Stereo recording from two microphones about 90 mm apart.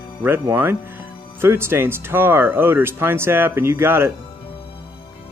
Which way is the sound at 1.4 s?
25° right (ahead or behind).